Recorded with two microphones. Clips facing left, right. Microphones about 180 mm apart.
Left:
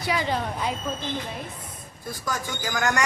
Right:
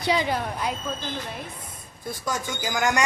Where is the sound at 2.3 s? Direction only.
20° right (ahead or behind).